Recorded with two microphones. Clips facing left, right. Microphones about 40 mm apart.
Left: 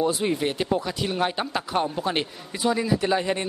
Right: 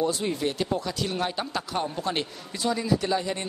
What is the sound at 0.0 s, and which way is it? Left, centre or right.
Speech, left.